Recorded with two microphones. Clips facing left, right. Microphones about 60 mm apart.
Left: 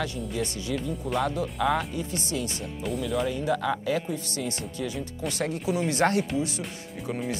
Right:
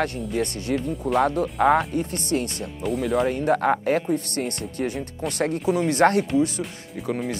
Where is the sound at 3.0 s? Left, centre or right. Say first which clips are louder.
Right 6 dB; right.